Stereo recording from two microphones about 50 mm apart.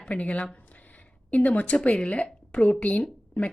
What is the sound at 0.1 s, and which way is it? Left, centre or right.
A woman's voice, left.